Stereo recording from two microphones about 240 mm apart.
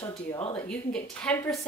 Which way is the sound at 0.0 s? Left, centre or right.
Centre.